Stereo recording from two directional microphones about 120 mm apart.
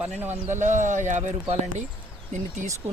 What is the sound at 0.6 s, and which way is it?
Speech, 90° right.